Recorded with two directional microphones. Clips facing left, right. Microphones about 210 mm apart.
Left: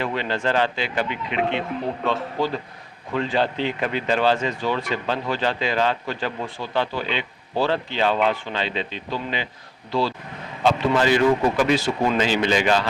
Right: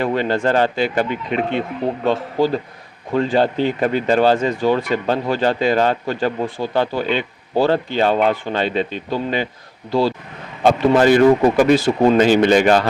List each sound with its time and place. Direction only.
0.0 s speech: 45° right (ahead or behind)